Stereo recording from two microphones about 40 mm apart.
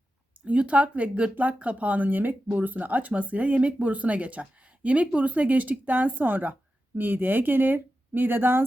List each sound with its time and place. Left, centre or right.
0.4 s speech: right